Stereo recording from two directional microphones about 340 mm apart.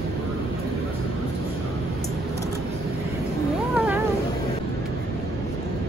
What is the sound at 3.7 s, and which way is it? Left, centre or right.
Cat, centre.